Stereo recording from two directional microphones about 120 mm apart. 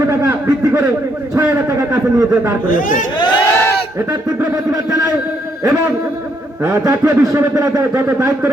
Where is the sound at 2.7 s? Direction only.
90° left.